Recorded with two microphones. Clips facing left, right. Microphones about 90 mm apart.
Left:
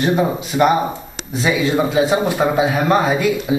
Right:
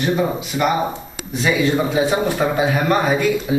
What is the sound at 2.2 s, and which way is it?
A man's voice, 15° left (ahead or behind).